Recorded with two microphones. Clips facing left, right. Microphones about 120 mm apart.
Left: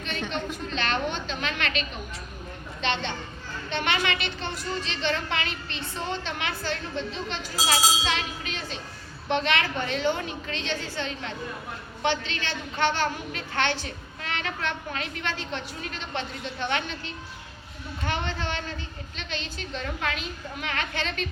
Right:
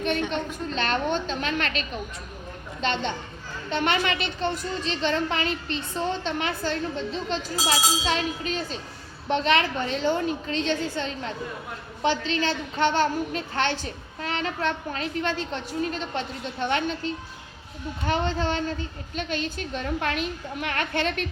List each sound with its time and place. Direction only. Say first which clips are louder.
0.3 s a woman's voice: right 2 dB; 45° right (ahead or behind)
2.8 s a woman's voice: right 2 dB; 45° right (ahead or behind)
18.1 s a woman's voice: right 6 dB; 40° right (ahead or behind); by 21.2 s 55° right (ahead or behind)